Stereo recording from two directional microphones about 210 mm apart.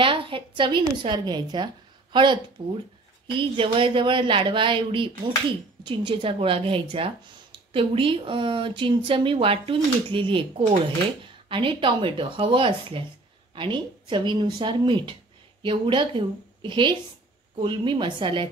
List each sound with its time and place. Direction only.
0.0 s speech: 25° right (ahead or behind)